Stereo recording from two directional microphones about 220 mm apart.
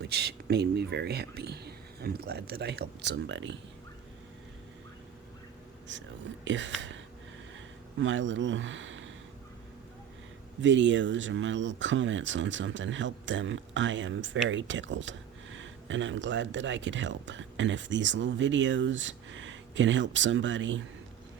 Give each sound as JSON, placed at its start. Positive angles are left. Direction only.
{"t": 0.0, "sound": "speech", "side_deg": -50}
{"t": 5.9, "sound": "speech", "side_deg": -55}
{"t": 10.6, "sound": "speech", "side_deg": -55}